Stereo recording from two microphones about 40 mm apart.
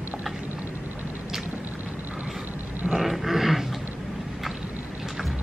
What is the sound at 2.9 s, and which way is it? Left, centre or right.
Dog, centre.